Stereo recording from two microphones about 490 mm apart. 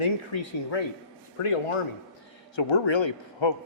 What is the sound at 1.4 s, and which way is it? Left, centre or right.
Speech, left.